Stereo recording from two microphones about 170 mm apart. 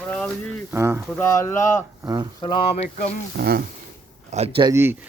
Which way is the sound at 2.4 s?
30° left (ahead or behind).